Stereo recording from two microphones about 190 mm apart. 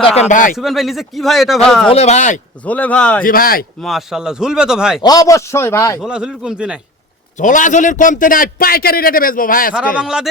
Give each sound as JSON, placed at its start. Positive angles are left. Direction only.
{"t": 0.0, "sound": "a man's voice", "side_deg": 35}
{"t": 0.5, "sound": "a man's voice", "side_deg": 0}
{"t": 1.9, "sound": "a man's voice", "side_deg": 35}
{"t": 2.6, "sound": "a man's voice", "side_deg": 10}
{"t": 3.2, "sound": "a man's voice", "side_deg": 50}
{"t": 3.8, "sound": "a man's voice", "side_deg": 0}
{"t": 5.0, "sound": "a man's voice", "side_deg": 20}
{"t": 6.0, "sound": "a man's voice", "side_deg": -5}
{"t": 7.3, "sound": "a man's voice", "side_deg": 40}
{"t": 9.7, "sound": "a man's voice", "side_deg": -5}